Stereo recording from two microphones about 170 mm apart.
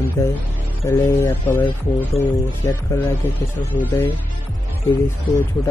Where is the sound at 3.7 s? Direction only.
10° left (ahead or behind).